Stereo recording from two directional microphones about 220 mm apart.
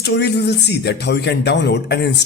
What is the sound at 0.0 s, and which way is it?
Speech, 50° left (ahead or behind).